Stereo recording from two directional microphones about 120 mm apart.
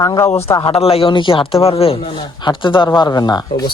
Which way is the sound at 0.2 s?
20° left (ahead or behind).